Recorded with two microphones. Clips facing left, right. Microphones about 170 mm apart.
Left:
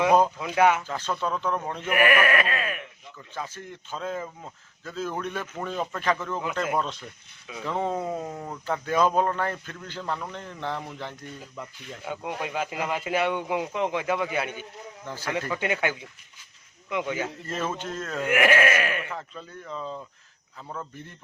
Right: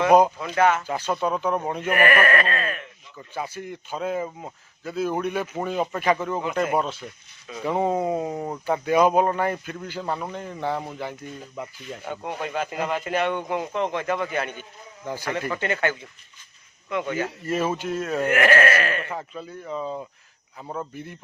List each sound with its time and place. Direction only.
0.3 s a man's voice: 10° left (ahead or behind)
0.9 s speech: 10° right (ahead or behind)
1.9 s a man's voice: 10° left (ahead or behind)
3.2 s speech: 10° right (ahead or behind)
12.0 s a man's voice: 5° left (ahead or behind)
15.0 s speech: 15° right (ahead or behind)
15.5 s a man's voice: 10° left (ahead or behind)
17.4 s speech: 10° right (ahead or behind)
18.3 s a man's voice: 10° left (ahead or behind)
19.1 s speech: 10° right (ahead or behind)
20.6 s speech: 20° right (ahead or behind)
20.9 s speech: 10° right (ahead or behind)